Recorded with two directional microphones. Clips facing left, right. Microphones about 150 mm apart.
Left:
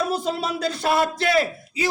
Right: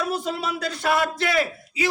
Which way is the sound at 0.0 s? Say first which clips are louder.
Left 2 dB; 30° left (ahead or behind).